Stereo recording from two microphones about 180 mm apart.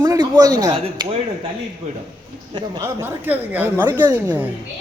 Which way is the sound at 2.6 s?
25° right (ahead or behind).